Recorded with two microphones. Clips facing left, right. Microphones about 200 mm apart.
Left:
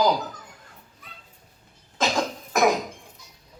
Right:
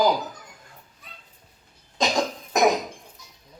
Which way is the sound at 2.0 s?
15° right (ahead or behind).